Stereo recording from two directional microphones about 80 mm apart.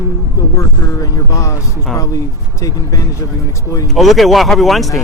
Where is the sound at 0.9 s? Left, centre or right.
Left.